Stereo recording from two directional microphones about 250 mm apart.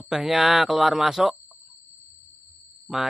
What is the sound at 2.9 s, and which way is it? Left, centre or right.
Speech, centre.